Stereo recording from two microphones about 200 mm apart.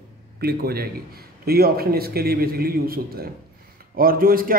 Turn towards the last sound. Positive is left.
turn(degrees=-45)  # may be behind; listen again after turning